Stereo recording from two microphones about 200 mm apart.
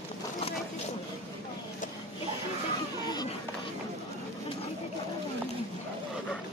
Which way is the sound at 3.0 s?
20° left (ahead or behind).